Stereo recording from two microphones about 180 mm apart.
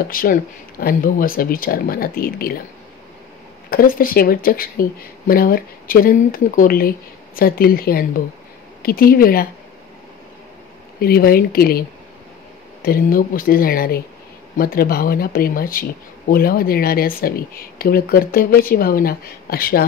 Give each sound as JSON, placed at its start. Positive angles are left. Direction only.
{"t": 0.1, "sound": "speech", "side_deg": 50}
{"t": 3.7, "sound": "speech", "side_deg": 55}
{"t": 11.0, "sound": "speech", "side_deg": 55}
{"t": 12.8, "sound": "speech", "side_deg": 55}